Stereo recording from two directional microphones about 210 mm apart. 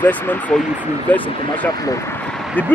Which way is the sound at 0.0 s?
10° left (ahead or behind).